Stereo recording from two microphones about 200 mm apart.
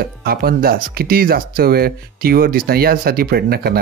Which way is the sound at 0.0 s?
50° right (ahead or behind).